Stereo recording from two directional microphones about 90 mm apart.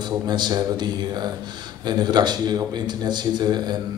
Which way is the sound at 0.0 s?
55° right (ahead or behind).